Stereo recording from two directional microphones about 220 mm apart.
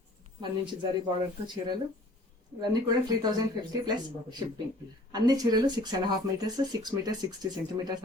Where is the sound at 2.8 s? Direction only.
20° right (ahead or behind).